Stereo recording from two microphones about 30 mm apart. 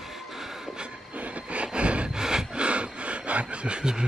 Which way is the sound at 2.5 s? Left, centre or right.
Right.